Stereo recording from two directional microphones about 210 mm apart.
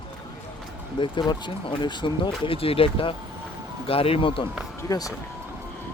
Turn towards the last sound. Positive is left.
turn(degrees=15)  # may be behind; listen again after turning